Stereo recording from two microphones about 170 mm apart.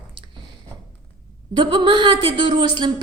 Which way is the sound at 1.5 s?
25° right (ahead or behind).